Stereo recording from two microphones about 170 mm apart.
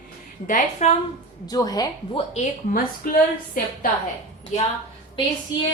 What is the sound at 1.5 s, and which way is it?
Speech, 20° left (ahead or behind).